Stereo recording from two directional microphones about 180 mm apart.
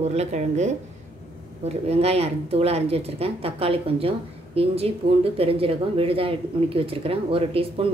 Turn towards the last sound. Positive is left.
turn(degrees=-30)  # may be behind; listen again after turning